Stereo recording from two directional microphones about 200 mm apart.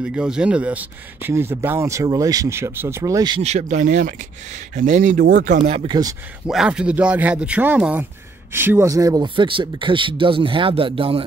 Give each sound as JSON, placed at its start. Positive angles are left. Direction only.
{"t": 0.0, "sound": "speech", "side_deg": -5}
{"t": 3.4, "sound": "speech", "side_deg": -35}
{"t": 5.6, "sound": "speech", "side_deg": -25}
{"t": 6.4, "sound": "speech", "side_deg": -5}